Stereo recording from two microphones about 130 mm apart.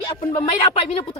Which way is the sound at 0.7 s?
45° left (ahead or behind).